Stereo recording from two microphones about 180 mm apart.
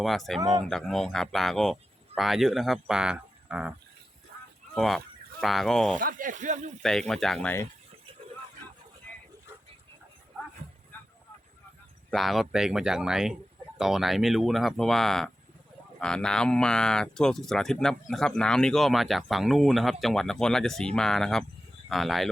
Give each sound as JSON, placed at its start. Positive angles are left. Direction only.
{"t": 0.0, "sound": "speech", "side_deg": 0}
{"t": 6.0, "sound": "speech", "side_deg": -50}
{"t": 6.8, "sound": "speech", "side_deg": 5}
{"t": 12.1, "sound": "speech", "side_deg": 0}